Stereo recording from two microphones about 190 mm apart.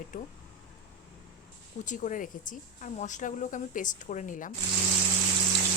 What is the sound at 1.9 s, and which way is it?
A woman's voice, 40° left (ahead or behind).